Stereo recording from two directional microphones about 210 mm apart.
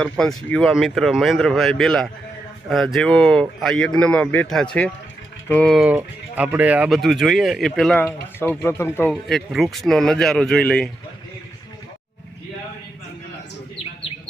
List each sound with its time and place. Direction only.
0.0 s speech: 5° left (ahead or behind)